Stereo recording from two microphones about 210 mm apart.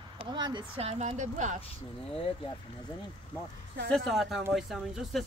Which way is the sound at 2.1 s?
25° left (ahead or behind).